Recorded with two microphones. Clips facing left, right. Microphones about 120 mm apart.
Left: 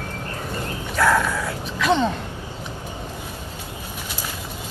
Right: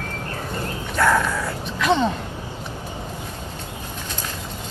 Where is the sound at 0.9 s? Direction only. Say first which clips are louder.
Even; centre (ahead or behind).